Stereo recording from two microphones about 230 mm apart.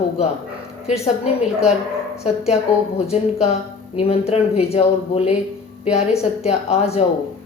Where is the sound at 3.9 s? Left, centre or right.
Left.